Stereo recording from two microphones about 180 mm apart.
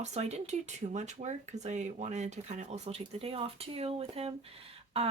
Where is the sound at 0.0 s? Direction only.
40° right (ahead or behind).